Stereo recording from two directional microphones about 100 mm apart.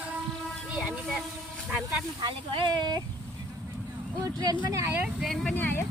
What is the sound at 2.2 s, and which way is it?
Speech, 50° right (ahead or behind).